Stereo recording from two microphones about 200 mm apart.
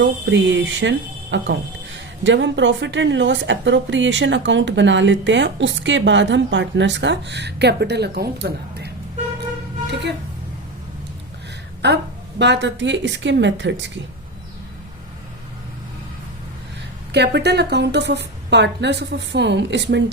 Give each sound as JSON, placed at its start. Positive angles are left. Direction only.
{"t": 0.0, "sound": "a woman's voice", "side_deg": -65}
{"t": 11.8, "sound": "a woman's voice", "side_deg": -60}
{"t": 17.1, "sound": "a woman's voice", "side_deg": -55}